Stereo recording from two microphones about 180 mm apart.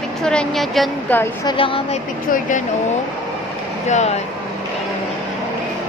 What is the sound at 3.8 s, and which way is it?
Speech, 40° left (ahead or behind).